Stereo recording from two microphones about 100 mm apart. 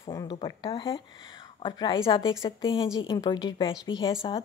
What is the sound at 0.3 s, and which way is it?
Speech, 45° left (ahead or behind).